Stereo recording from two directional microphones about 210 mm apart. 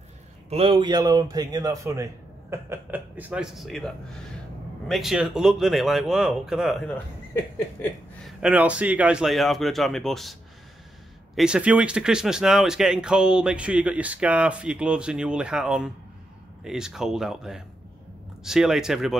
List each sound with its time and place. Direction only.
0.5 s a man's voice: 25° right (ahead or behind); by 7.0 s centre (ahead or behind)
8.3 s speech: 5° right (ahead or behind)
11.3 s speech: 5° right (ahead or behind)